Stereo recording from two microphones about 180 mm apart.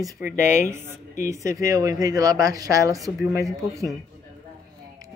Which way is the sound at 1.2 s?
15° right (ahead or behind).